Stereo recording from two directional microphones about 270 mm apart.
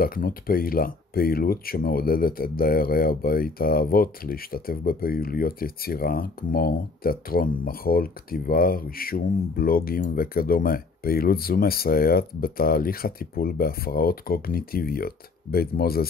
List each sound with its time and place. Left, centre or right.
0.0 s speech: left